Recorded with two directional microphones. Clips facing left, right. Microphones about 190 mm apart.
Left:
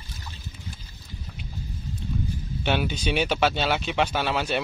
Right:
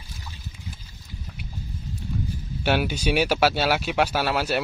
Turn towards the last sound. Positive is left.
turn(degrees=-5)  # may be behind; listen again after turning